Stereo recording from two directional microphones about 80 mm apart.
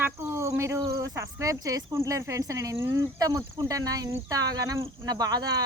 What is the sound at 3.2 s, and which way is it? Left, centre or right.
Speech, right.